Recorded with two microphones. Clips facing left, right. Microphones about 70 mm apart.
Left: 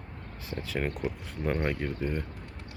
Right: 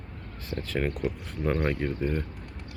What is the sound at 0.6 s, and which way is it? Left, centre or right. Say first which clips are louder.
Speech: right 3 dB; centre.